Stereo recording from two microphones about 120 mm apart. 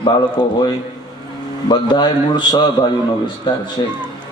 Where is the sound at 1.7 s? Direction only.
35° left (ahead or behind).